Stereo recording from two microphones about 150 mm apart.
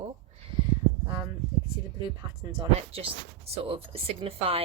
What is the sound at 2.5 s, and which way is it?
A woman's voice, 40° right (ahead or behind).